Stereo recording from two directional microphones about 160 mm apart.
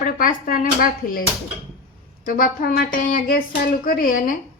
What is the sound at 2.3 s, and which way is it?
Speech, 60° left (ahead or behind).